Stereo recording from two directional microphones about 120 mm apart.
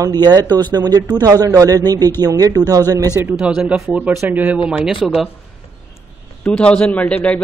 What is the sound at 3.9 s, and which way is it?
A man's voice, 15° right (ahead or behind).